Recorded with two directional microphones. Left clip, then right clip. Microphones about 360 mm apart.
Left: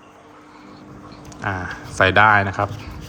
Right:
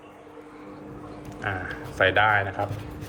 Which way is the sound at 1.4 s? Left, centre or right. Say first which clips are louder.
Left 5 dB; centre.